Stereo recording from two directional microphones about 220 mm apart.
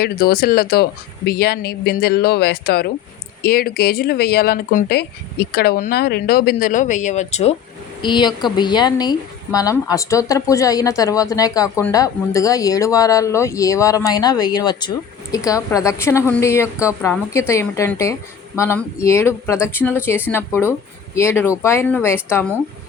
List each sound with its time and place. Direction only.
0.0 s speech: 45° left (ahead or behind)
8.0 s a woman's voice: 20° left (ahead or behind)